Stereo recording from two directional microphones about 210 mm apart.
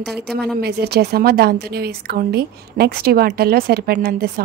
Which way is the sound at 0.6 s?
50° right (ahead or behind).